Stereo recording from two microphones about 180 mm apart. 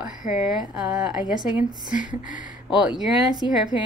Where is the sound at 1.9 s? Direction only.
45° left (ahead or behind).